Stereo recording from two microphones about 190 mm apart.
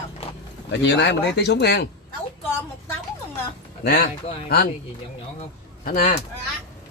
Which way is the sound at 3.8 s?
60° left (ahead or behind).